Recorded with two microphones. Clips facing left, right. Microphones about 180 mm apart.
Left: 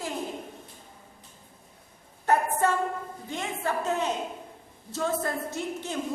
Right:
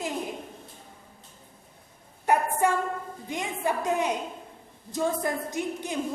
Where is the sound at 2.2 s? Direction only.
15° right (ahead or behind).